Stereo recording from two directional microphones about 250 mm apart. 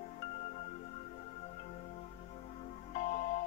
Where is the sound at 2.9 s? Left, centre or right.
Left.